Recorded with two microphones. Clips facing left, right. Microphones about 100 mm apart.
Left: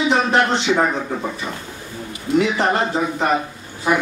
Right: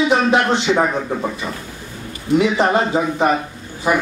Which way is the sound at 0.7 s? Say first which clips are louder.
Right 1 dB; 10° right (ahead or behind).